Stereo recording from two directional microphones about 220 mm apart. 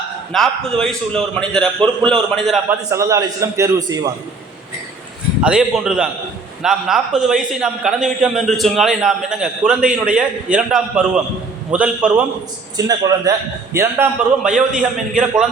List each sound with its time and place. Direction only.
0.3 s a man's voice: centre (ahead or behind)
2.6 s a man's voice: 15° right (ahead or behind)
5.4 s a man's voice: 5° right (ahead or behind)
12.7 s a man's voice: 15° right (ahead or behind)